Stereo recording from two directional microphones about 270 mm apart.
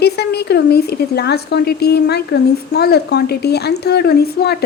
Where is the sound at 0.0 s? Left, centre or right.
Left.